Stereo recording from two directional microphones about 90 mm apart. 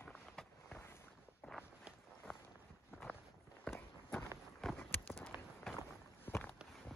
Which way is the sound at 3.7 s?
10° left (ahead or behind).